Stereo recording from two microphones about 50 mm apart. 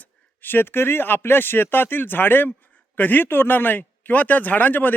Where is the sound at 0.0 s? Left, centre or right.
Left.